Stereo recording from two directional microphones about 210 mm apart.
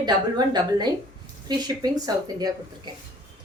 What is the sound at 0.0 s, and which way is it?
A woman's voice, 20° right (ahead or behind).